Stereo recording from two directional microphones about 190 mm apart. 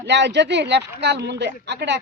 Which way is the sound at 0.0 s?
65° right (ahead or behind).